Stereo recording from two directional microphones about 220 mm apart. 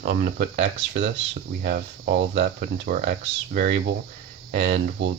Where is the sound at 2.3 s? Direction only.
35° right (ahead or behind).